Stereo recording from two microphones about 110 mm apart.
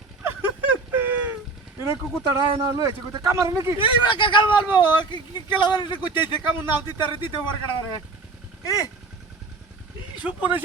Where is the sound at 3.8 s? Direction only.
50° left (ahead or behind).